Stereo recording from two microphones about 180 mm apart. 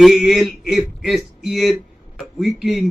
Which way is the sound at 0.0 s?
Centre (ahead or behind).